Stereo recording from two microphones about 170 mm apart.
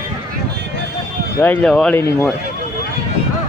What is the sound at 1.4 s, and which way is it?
Speech, 10° left (ahead or behind).